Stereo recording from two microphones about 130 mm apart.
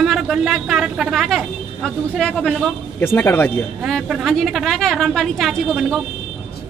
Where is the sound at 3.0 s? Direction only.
15° left (ahead or behind).